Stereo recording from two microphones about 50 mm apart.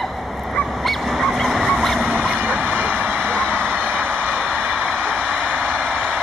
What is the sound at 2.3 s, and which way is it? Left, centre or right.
Vehicle, right.